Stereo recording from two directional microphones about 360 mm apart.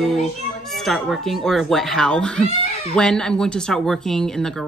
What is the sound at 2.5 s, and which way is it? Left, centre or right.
Cat, centre.